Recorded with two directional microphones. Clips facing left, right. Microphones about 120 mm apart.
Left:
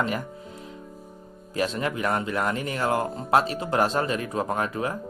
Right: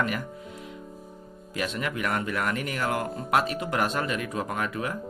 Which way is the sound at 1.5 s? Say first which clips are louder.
Left 4 dB; 35° left (ahead or behind).